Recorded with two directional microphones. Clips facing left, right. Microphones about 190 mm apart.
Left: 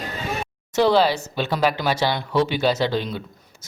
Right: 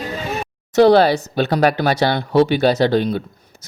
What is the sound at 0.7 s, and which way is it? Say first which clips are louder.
Speech: right 6 dB; 60° right (ahead or behind).